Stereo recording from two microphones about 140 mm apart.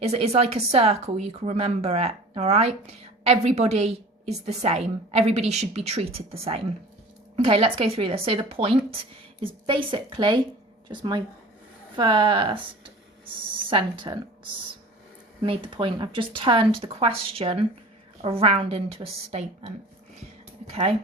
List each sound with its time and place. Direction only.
0.0 s a woman's voice: 50° right (ahead or behind)
15.4 s a woman's voice: 40° right (ahead or behind)